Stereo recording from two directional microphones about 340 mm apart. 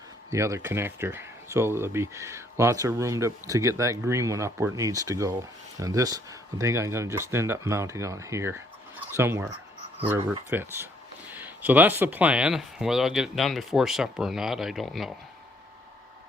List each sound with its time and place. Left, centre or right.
0.3 s speech: centre